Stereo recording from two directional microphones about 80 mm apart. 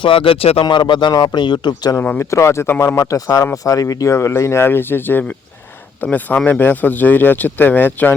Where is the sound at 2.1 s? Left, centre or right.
Left.